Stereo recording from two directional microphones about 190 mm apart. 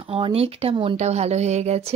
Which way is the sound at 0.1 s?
30° right (ahead or behind).